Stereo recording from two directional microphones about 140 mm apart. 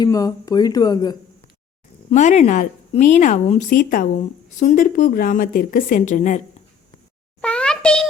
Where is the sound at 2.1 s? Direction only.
55° left (ahead or behind).